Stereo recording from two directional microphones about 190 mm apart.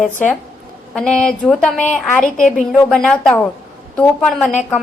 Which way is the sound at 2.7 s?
5° left (ahead or behind).